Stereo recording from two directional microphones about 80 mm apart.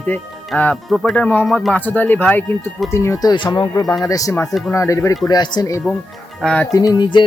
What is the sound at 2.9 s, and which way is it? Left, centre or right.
Speech, left.